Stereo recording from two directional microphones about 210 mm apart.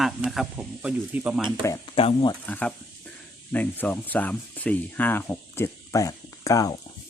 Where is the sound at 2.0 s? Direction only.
25° left (ahead or behind).